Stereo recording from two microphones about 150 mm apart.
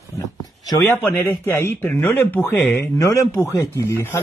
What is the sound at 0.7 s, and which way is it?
Speech, 20° left (ahead or behind).